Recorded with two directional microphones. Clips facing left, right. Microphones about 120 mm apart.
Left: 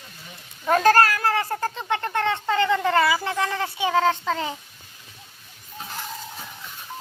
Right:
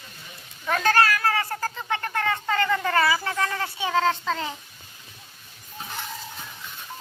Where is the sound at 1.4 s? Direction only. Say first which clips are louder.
Left 3 dB; 25° left (ahead or behind).